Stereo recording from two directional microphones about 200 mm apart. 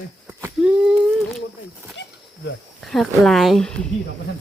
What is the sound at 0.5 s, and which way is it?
Speech, 5° right (ahead or behind).